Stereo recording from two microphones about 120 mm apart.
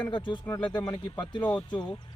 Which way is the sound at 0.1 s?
40° left (ahead or behind).